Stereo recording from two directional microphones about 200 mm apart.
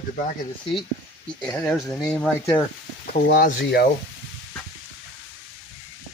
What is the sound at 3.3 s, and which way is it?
Speech, 55° left (ahead or behind).